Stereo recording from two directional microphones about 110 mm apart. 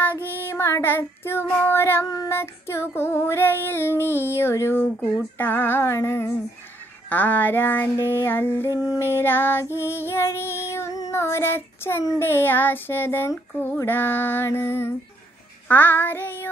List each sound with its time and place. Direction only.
0.0 s child singing: 20° left (ahead or behind)
2.0 s female singing: 30° left (ahead or behind)
9.8 s child singing: 20° left (ahead or behind)
12.0 s female singing: 25° left (ahead or behind)